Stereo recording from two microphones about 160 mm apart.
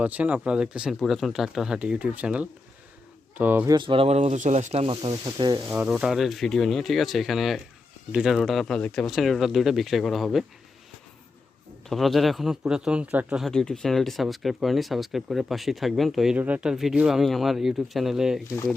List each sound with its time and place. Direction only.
0.0 s speech: 10° right (ahead or behind)
3.7 s speech: 30° right (ahead or behind)
5.6 s speech: 10° right (ahead or behind)
11.9 s speech: centre (ahead or behind)
13.5 s speech: 5° left (ahead or behind)